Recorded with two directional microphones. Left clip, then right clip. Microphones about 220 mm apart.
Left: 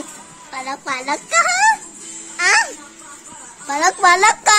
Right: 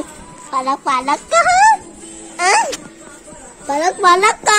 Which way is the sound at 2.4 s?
10° left (ahead or behind).